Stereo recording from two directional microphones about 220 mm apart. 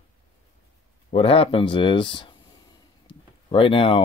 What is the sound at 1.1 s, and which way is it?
Speech, 25° left (ahead or behind).